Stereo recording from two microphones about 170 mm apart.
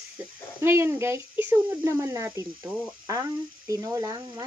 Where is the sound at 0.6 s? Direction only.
15° right (ahead or behind).